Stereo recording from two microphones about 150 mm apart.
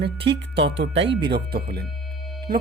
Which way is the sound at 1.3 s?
90° right.